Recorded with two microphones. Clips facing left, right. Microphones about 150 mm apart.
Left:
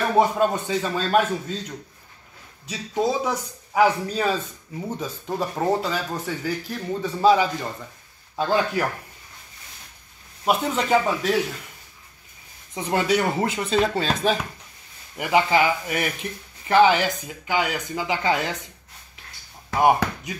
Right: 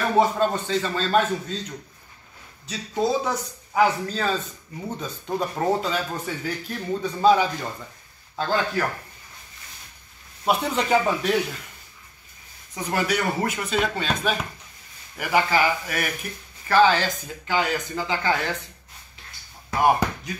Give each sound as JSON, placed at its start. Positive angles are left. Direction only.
{"t": 0.2, "sound": "speech", "side_deg": 10}
{"t": 2.7, "sound": "a man's voice", "side_deg": 10}
{"t": 10.4, "sound": "a man's voice", "side_deg": 0}
{"t": 12.7, "sound": "speech", "side_deg": 25}
{"t": 15.1, "sound": "speech", "side_deg": 20}